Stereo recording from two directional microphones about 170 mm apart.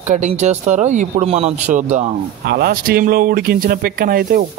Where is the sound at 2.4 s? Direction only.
65° right (ahead or behind).